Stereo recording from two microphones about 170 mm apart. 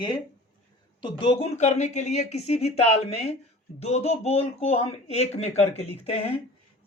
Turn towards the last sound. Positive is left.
turn(degrees=35)  # may be behind; listen again after turning